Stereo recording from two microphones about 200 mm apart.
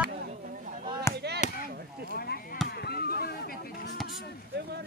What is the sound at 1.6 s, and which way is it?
Chop, 50° right (ahead or behind).